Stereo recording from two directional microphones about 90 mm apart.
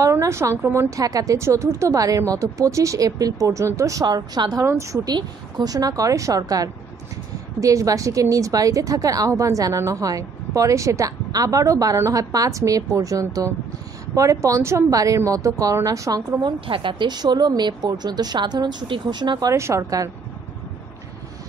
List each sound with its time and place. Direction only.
0.0 s a woman's voice: 35° right (ahead or behind)
4.0 s a woman's voice: 50° right (ahead or behind)
4.6 s a woman's voice: 30° right (ahead or behind)
5.0 s a woman's voice: 45° right (ahead or behind)
16.6 s a woman's voice: 70° right (ahead or behind); by 19.5 s 55° right (ahead or behind)
19.5 s a woman's voice: 35° right (ahead or behind)